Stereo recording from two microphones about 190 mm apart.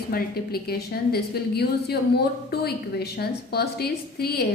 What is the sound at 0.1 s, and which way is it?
A woman's voice, 55° left (ahead or behind).